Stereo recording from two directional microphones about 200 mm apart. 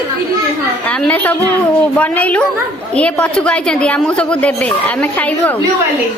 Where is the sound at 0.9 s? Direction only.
5° left (ahead or behind).